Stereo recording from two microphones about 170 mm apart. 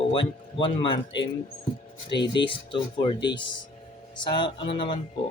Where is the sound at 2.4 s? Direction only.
30° left (ahead or behind).